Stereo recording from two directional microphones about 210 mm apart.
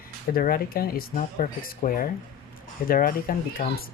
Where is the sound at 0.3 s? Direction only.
45° left (ahead or behind).